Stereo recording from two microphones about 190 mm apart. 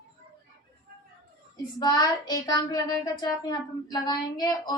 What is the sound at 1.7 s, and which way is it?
Child singing, 20° left (ahead or behind).